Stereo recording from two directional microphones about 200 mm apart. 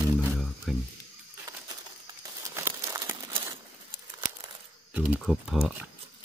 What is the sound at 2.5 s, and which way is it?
Crumpling, 15° right (ahead or behind).